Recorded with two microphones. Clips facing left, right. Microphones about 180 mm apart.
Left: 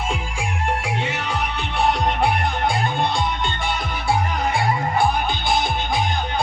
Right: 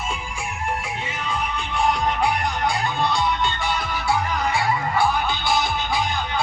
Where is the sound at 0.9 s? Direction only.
75° left (ahead or behind).